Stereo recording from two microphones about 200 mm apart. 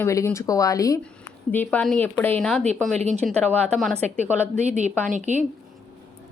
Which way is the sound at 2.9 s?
35° right (ahead or behind).